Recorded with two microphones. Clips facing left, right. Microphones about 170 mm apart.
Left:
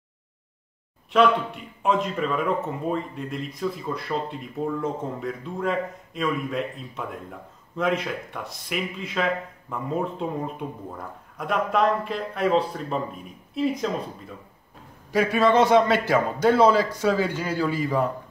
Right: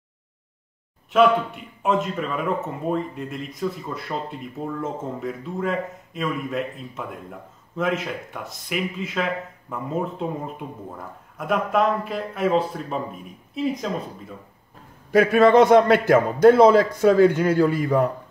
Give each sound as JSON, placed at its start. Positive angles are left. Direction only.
{"t": 1.1, "sound": "a man's voice", "side_deg": 0}
{"t": 15.0, "sound": "a man's voice", "side_deg": -60}